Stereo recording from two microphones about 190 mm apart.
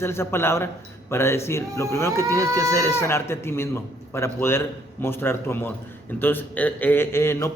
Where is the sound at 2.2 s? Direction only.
15° right (ahead or behind).